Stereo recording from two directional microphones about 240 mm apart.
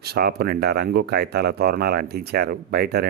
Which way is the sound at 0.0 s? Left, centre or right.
Right.